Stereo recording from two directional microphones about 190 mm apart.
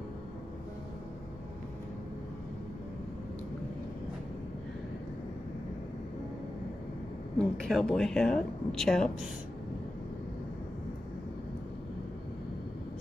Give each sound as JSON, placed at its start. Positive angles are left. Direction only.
{"t": 7.3, "sound": "a woman's voice", "side_deg": 5}